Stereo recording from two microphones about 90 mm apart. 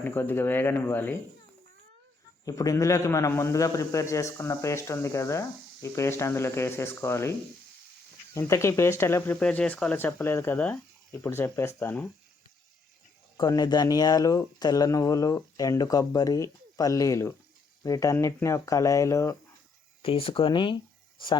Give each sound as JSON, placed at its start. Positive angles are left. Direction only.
{"t": 0.0, "sound": "speech", "side_deg": 20}
{"t": 2.4, "sound": "a man's voice", "side_deg": 40}
{"t": 9.4, "sound": "speech", "side_deg": 10}
{"t": 13.3, "sound": "a man's voice", "side_deg": 40}
{"t": 20.0, "sound": "speech", "side_deg": 90}